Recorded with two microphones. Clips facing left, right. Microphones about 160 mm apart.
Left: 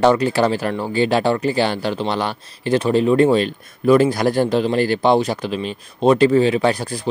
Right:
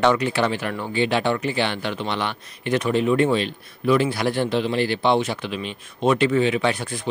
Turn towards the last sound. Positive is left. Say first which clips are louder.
# left 5 dB
turn(degrees=35)  # may be behind; listen again after turning